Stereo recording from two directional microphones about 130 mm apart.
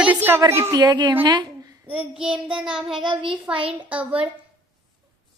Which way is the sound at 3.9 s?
10° right (ahead or behind).